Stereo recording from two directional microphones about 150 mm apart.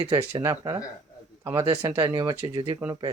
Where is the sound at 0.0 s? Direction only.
25° right (ahead or behind).